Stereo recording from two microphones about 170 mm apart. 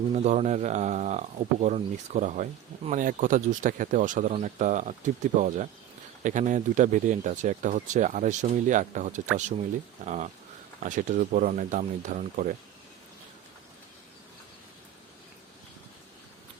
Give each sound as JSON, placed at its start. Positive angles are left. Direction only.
{"t": 0.1, "sound": "speech", "side_deg": -40}